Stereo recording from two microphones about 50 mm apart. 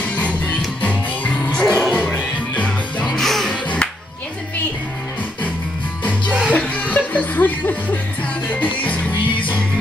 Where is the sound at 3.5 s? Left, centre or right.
Left.